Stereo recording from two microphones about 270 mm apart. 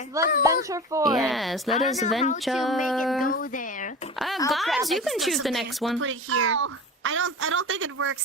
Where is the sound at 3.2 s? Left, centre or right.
Left.